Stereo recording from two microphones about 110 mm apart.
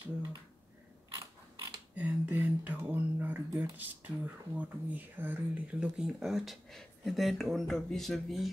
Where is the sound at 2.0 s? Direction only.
15° right (ahead or behind).